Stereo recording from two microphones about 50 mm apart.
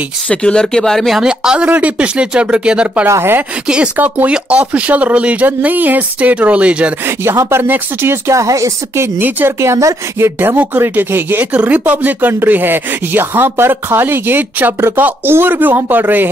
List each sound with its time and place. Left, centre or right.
0.3 s speech: centre
1.2 s speech: centre
1.7 s speech: right
3.1 s speech: right
3.6 s speech: centre
3.9 s speech: right
7.5 s speech: right
8.3 s a woman's voice: right
9.6 s a woman's voice: right
10.1 s speech: right
11.5 s speech: right